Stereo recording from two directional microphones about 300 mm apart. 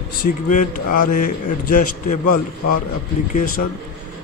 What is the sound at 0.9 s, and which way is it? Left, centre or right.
Speech, left.